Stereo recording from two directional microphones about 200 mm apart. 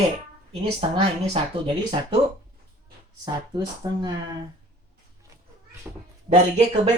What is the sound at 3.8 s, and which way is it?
Speech, 20° right (ahead or behind).